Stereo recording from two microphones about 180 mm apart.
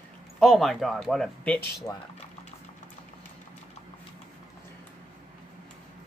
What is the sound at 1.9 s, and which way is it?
Speech, 15° left (ahead or behind).